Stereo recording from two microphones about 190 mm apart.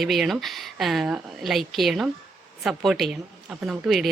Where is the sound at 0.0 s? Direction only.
Centre (ahead or behind).